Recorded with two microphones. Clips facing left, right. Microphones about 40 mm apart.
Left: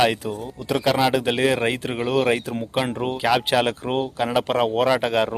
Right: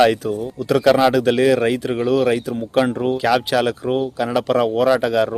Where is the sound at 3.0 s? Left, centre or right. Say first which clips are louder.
Right 3 dB; centre.